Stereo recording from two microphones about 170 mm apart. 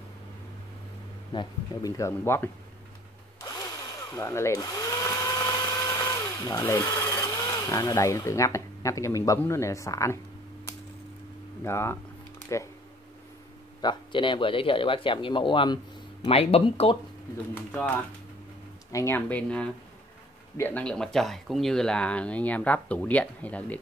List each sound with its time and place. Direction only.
1.3 s speech: 25° left (ahead or behind)
3.3 s drill: 20° left (ahead or behind)
4.1 s speech: 15° left (ahead or behind)
11.6 s speech: 15° left (ahead or behind)
13.7 s speech: 25° left (ahead or behind)
17.6 s speech: 10° left (ahead or behind)